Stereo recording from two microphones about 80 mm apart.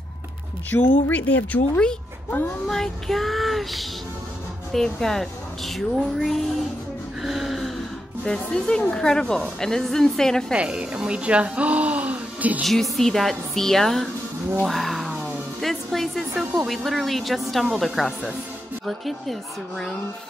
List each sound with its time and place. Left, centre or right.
0.7 s speech: left
2.7 s a woman's voice: centre
7.2 s music: centre
8.2 s a woman's voice: centre
10.5 s speech: centre
12.9 s a woman's voice: centre
14.6 s a sound: centre
15.6 s a woman's voice: centre